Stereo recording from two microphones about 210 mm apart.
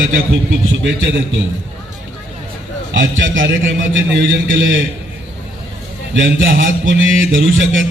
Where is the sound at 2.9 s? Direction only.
65° right (ahead or behind).